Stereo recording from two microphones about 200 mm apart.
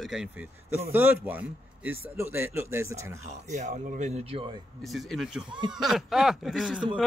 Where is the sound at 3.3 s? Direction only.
35° right (ahead or behind).